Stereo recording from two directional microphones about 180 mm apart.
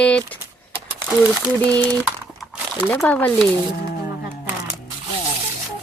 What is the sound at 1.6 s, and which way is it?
Speech, 20° right (ahead or behind).